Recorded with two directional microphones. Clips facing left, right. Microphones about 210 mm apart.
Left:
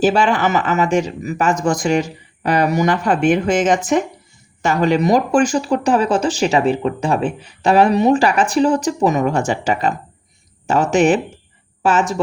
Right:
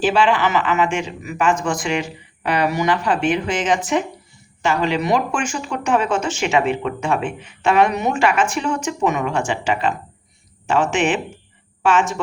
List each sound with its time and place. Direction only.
0.0 s speech: 45° left (ahead or behind)